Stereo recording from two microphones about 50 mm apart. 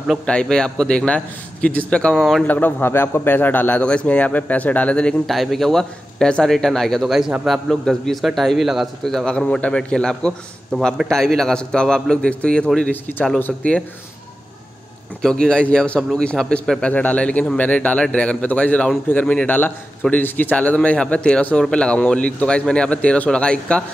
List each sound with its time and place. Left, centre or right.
0.3 s a man's voice: centre
2.1 s speech: centre
2.4 s a man's voice: left
2.8 s a man's voice: left
3.8 s a man's voice: left
5.2 s speech: centre
7.1 s a man's voice: centre
7.7 s a man's voice: centre
9.0 s a man's voice: centre
15.2 s a man's voice: centre
16.4 s a man's voice: centre
16.8 s a man's voice: left
19.1 s a man's voice: left